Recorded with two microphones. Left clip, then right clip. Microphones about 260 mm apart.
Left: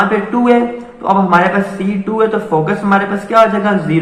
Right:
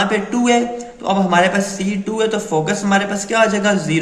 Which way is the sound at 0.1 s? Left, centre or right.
Right.